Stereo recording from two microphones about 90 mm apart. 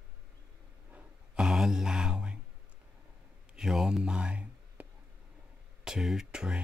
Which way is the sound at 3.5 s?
5° right (ahead or behind).